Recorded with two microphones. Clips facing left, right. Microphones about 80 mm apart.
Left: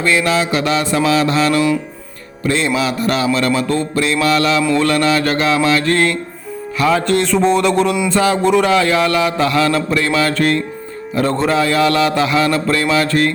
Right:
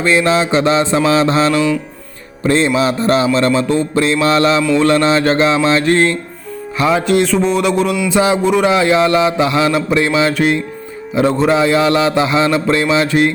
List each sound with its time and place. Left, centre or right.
0.0 s mantra: right
2.5 s a man's voice: right
3.3 s mantra: right
6.7 s music: right
7.1 s a sound: centre
8.1 s mantra: centre
8.4 s a sound: centre
8.6 s mantra: right
11.1 s a man's voice: centre
11.4 s mantra: right